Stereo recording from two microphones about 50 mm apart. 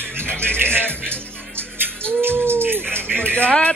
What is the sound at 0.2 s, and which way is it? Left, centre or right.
Music, left.